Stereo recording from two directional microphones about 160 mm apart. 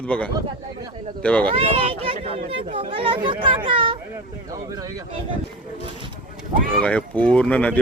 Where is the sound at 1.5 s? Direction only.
35° right (ahead or behind).